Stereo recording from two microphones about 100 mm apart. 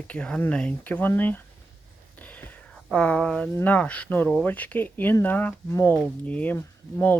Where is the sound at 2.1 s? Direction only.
15° left (ahead or behind).